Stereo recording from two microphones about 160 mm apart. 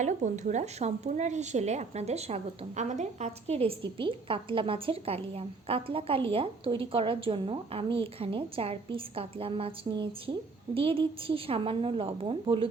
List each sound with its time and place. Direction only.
0.0 s speech: 50° right (ahead or behind)